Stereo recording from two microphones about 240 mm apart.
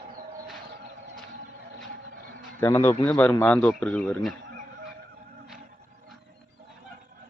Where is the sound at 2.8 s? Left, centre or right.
Centre.